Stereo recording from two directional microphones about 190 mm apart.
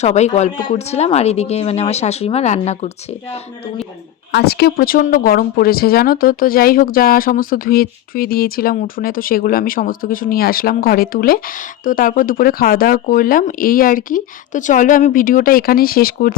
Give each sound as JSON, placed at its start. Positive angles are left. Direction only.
{"t": 0.0, "sound": "speech", "side_deg": 35}
{"t": 4.3, "sound": "a woman's voice", "side_deg": 60}